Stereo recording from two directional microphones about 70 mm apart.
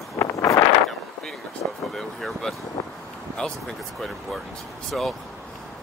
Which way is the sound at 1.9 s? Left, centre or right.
Centre.